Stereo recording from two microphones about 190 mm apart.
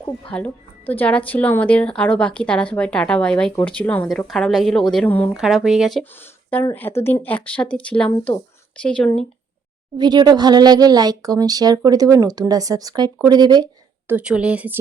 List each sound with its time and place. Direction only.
0.0 s a woman's voice: 5° left (ahead or behind)
5.4 s speech: centre (ahead or behind)
6.5 s a woman's voice: 10° left (ahead or behind)
8.1 s speech: 20° left (ahead or behind)
10.0 s speech: 20° right (ahead or behind)
14.1 s speech: 5° right (ahead or behind)